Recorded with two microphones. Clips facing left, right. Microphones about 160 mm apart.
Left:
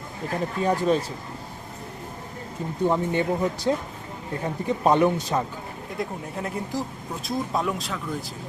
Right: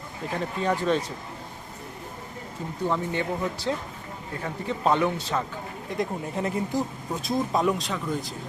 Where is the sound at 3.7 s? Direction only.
20° left (ahead or behind).